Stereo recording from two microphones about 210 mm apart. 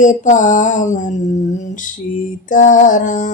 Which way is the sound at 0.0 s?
35° left (ahead or behind).